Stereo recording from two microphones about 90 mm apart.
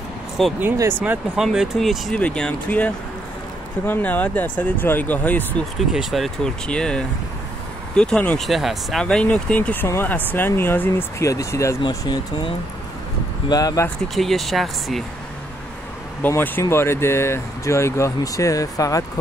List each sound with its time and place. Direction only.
0.4 s speech: centre (ahead or behind)
2.1 s speech: 10° left (ahead or behind)
5.9 s speech: centre (ahead or behind)
8.4 s speech: centre (ahead or behind)
9.0 s speech: 15° left (ahead or behind)
11.2 s speech: 35° left (ahead or behind)
13.5 s speech: 45° left (ahead or behind)
14.0 s speech: centre (ahead or behind)
16.2 s speech: 20° left (ahead or behind); by 19.0 s 40° left (ahead or behind)